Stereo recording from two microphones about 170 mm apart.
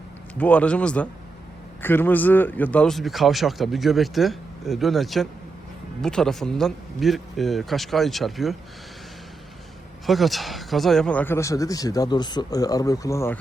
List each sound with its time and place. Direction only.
0.3 s speech: 10° left (ahead or behind)
10.1 s speech: centre (ahead or behind)